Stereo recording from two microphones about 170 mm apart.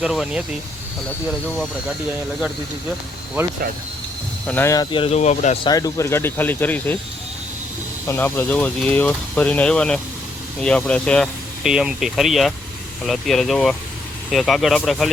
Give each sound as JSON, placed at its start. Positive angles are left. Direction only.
{"t": 0.0, "sound": "speech", "side_deg": -5}
{"t": 4.4, "sound": "speech", "side_deg": 15}
{"t": 5.6, "sound": "speech", "side_deg": 20}
{"t": 8.0, "sound": "speech", "side_deg": 15}